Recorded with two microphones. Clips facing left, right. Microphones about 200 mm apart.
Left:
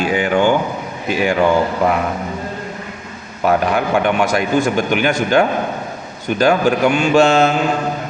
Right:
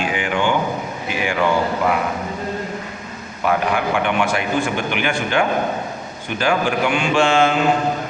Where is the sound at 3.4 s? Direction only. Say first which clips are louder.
Left 3 dB; 40° left (ahead or behind).